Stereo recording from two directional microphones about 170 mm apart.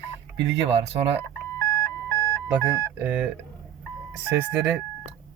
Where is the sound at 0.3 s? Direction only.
90° right.